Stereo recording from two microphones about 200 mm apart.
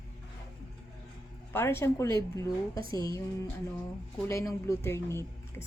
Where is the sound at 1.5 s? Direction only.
10° left (ahead or behind).